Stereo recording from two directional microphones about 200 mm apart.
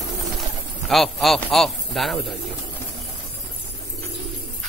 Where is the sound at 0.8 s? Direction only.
Centre (ahead or behind).